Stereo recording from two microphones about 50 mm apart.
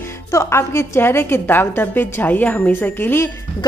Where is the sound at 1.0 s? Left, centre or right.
Left.